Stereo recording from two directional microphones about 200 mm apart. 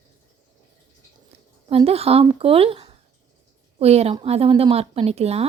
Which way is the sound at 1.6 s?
30° right (ahead or behind).